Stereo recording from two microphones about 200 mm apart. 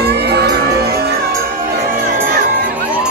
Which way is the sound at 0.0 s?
55° right (ahead or behind).